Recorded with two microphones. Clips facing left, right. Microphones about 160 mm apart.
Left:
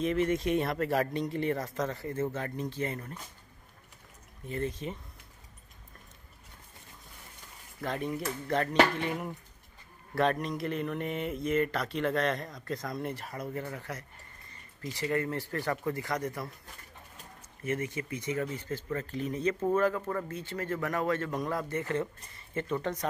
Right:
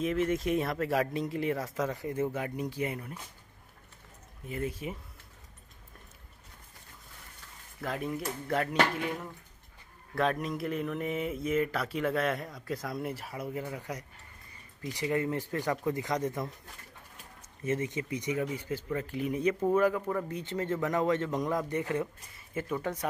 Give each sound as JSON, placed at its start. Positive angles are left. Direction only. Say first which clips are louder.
{"t": 0.0, "sound": "speech", "louder": "left 1 dB", "side_deg": 0}
{"t": 4.5, "sound": "speech", "louder": "left 1 dB", "side_deg": -5}
{"t": 7.8, "sound": "speech", "louder": "left 1 dB", "side_deg": -5}
{"t": 10.1, "sound": "speech", "louder": "left 1 dB", "side_deg": 0}
{"t": 17.6, "sound": "speech", "louder": "right 2 dB", "side_deg": -20}